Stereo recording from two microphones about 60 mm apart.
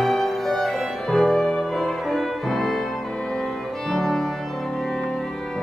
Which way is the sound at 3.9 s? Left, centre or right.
Centre.